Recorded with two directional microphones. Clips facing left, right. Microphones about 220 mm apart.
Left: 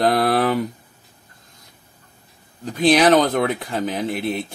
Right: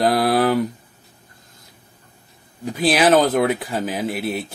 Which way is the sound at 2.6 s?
5° right (ahead or behind).